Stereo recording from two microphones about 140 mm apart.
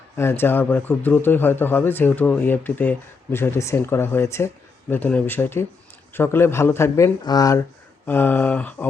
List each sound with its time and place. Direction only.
0.2 s speech: 15° left (ahead or behind)
8.0 s speech: 15° left (ahead or behind)